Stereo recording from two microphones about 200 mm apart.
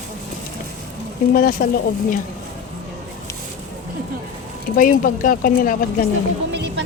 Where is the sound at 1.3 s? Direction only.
45° left (ahead or behind).